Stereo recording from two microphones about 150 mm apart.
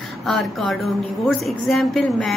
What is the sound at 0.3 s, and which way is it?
Speech, centre (ahead or behind).